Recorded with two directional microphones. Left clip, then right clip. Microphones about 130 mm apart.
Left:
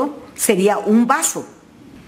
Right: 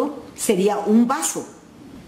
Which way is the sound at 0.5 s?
35° left (ahead or behind).